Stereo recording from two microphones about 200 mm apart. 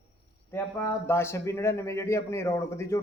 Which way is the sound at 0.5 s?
15° left (ahead or behind).